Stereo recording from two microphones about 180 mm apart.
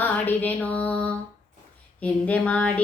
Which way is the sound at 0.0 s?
10° left (ahead or behind).